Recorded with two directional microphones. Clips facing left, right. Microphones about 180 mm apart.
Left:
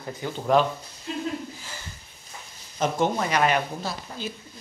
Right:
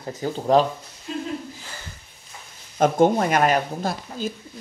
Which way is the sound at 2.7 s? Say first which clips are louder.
Right 7 dB; 50° right (ahead or behind).